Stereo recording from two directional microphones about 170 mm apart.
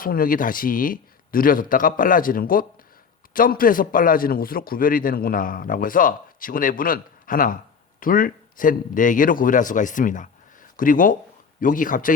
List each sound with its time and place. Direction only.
0.0 s a man's voice: 55° left (ahead or behind)